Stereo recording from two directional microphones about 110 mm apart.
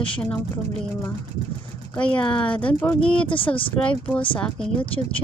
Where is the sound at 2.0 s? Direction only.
10° left (ahead or behind).